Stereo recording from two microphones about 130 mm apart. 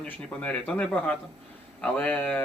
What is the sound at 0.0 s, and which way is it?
A man's voice, 10° left (ahead or behind).